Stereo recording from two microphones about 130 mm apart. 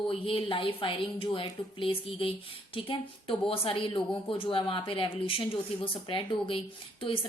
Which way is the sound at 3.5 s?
45° left (ahead or behind).